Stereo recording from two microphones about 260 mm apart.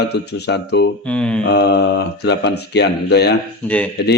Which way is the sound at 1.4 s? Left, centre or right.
Left.